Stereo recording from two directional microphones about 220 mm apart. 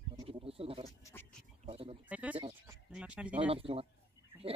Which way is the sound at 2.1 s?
5° right (ahead or behind).